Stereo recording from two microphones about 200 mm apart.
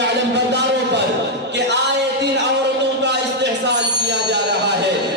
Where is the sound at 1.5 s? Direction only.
60° right (ahead or behind).